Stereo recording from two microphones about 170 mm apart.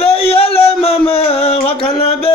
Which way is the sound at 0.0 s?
35° left (ahead or behind).